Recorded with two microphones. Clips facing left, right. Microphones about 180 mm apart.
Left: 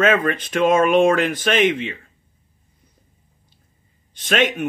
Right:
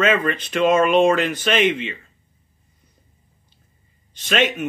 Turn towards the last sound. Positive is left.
turn(degrees=55)  # may be behind; listen again after turning